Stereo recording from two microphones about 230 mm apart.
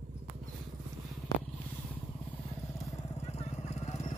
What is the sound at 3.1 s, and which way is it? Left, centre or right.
Vehicle, left.